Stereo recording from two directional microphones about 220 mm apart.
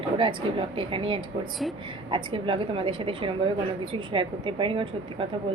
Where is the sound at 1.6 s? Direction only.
Centre (ahead or behind).